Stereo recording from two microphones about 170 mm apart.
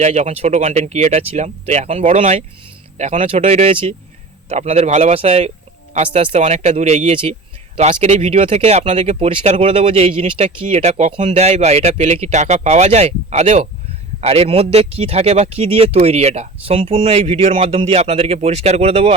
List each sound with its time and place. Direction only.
0.0 s speech: 40° right (ahead or behind)